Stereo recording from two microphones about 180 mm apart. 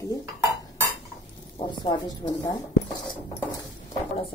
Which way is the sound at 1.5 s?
25° left (ahead or behind).